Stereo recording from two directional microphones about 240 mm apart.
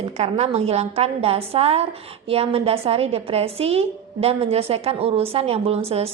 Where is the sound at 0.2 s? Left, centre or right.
Right.